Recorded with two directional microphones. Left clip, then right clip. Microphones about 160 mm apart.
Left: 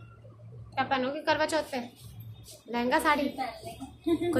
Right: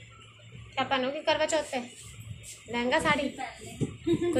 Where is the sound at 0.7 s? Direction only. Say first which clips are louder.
Even; 35° left (ahead or behind).